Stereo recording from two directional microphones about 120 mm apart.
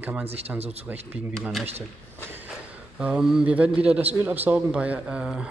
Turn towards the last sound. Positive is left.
turn(degrees=-10)  # may be behind; listen again after turning